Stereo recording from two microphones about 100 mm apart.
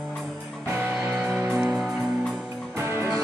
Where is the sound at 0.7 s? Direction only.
20° right (ahead or behind).